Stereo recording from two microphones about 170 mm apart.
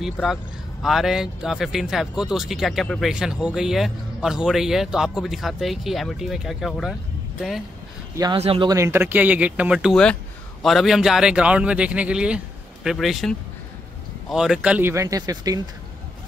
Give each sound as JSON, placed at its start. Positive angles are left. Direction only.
{"t": 0.0, "sound": "speech", "side_deg": 0}
{"t": 8.4, "sound": "speech", "side_deg": -35}
{"t": 8.6, "sound": "speech", "side_deg": -15}